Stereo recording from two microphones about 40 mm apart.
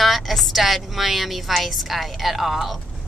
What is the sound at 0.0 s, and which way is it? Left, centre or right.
A woman's voice, centre.